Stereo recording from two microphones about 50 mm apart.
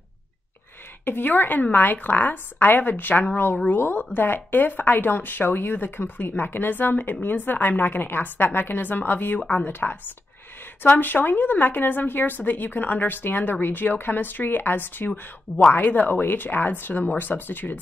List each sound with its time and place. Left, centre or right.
1.0 s a woman's voice: left
9.4 s speech: left
9.7 s speech: left
11.0 s speech: left